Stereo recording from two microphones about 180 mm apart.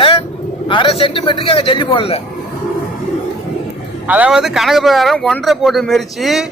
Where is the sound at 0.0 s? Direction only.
30° left (ahead or behind).